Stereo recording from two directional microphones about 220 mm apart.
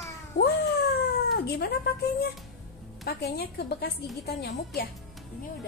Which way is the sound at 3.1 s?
45° left (ahead or behind).